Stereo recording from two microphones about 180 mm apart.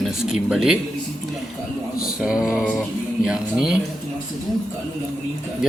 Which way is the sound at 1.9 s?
5° right (ahead or behind).